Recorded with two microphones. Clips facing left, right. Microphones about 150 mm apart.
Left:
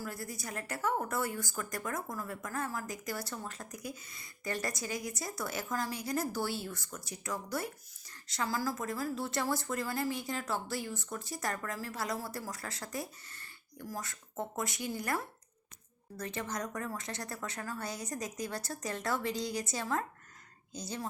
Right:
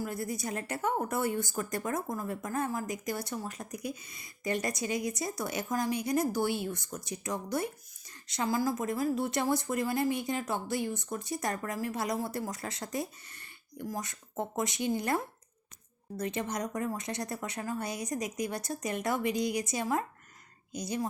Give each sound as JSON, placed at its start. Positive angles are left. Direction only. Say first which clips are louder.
{"t": 0.0, "sound": "a woman's voice", "louder": "right 6 dB", "side_deg": -20}